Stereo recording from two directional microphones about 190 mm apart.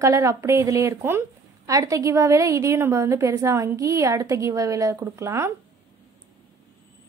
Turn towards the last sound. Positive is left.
turn(degrees=-15)  # may be behind; listen again after turning